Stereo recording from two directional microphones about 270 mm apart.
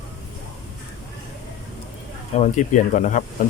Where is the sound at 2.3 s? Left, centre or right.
Left.